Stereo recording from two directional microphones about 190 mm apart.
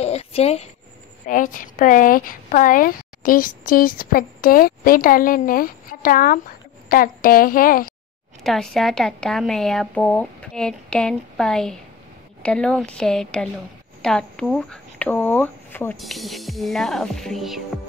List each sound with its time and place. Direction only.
0.0 s a sound: 35° left (ahead or behind)
1.2 s speech: 45° left (ahead or behind)
8.5 s a woman's voice: centre (ahead or behind)